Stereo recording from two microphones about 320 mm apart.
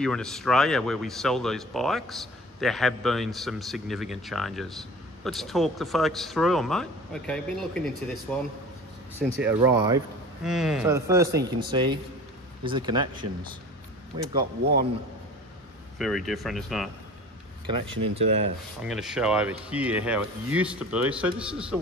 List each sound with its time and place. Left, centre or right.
0.0 s a man's voice: centre
14.4 s speech: right
16.0 s speech: centre
18.1 s speech: centre
18.8 s speech: centre